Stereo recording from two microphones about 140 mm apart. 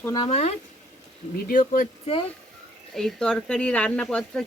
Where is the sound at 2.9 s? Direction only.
5° left (ahead or behind).